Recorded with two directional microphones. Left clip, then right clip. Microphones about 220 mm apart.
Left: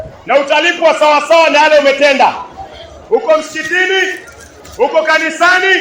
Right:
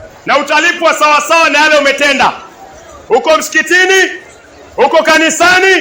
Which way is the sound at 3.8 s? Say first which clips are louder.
Right 3 dB; 50° right (ahead or behind).